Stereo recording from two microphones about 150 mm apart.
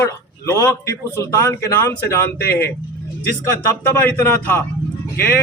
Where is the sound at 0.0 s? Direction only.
20° left (ahead or behind).